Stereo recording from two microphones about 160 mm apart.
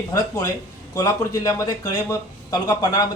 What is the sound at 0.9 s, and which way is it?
Speech, 20° left (ahead or behind).